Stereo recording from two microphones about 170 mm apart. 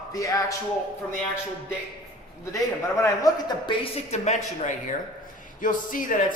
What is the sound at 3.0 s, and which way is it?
A man's voice, 20° left (ahead or behind).